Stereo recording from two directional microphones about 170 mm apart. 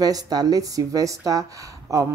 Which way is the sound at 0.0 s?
20° right (ahead or behind).